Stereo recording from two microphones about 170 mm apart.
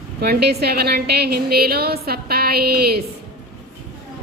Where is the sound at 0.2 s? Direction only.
70° right (ahead or behind).